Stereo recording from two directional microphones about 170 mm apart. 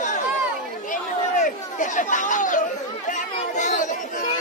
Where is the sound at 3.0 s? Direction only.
45° left (ahead or behind).